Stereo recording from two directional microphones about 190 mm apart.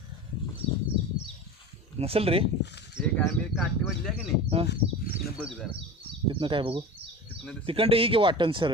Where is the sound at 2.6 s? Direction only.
65° left (ahead or behind).